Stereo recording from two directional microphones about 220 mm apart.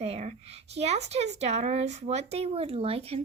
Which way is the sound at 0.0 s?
30° right (ahead or behind).